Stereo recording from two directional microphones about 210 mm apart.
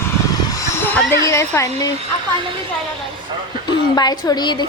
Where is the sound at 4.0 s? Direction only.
20° left (ahead or behind).